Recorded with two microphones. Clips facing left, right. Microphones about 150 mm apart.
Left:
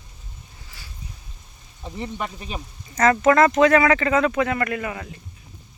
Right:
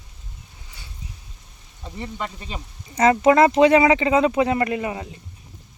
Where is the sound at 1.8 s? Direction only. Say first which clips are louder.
Left 1 dB; 15° left (ahead or behind).